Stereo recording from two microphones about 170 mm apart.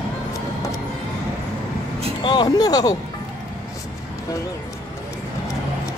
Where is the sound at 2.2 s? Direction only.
25° left (ahead or behind).